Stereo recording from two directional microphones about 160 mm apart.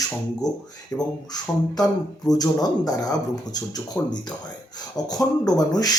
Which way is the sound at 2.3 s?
25° left (ahead or behind).